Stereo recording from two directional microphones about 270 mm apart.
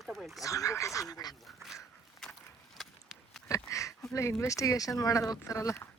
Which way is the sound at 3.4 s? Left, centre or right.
Centre.